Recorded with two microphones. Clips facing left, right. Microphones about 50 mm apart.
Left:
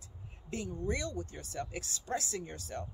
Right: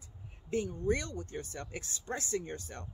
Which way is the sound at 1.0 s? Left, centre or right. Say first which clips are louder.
Left 1 dB; right.